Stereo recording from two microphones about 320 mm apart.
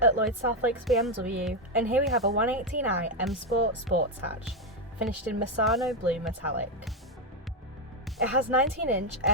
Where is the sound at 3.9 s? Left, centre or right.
Right.